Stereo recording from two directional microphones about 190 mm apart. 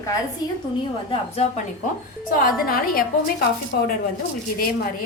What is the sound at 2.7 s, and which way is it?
Speech, 50° left (ahead or behind).